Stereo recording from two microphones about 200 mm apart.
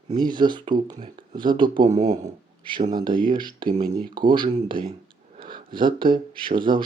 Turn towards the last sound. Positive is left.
turn(degrees=-25)  # may be behind; listen again after turning